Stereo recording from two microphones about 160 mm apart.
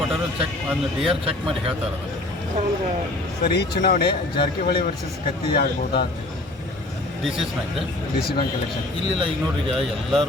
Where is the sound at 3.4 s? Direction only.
85° left.